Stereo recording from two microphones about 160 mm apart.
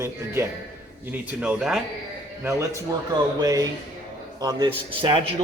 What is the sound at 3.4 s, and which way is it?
Speech, 25° right (ahead or behind).